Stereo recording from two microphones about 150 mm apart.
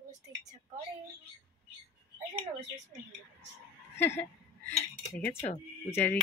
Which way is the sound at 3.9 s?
15° left (ahead or behind).